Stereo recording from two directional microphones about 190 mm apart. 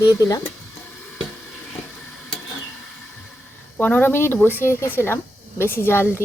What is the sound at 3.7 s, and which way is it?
A woman's voice, 10° left (ahead or behind).